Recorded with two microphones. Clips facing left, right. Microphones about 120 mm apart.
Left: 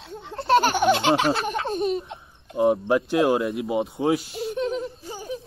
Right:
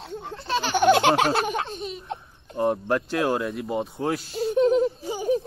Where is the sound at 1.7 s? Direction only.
55° left (ahead or behind).